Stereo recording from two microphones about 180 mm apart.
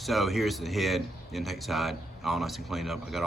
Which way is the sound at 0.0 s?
Centre (ahead or behind).